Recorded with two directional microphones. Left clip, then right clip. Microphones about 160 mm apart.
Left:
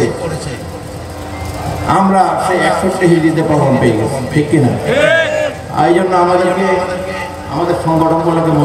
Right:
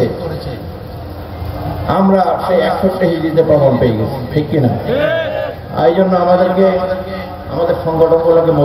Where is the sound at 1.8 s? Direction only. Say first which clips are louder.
Left 1 dB; 45° right (ahead or behind).